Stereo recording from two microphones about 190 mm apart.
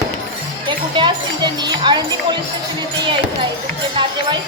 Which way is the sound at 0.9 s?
25° right (ahead or behind).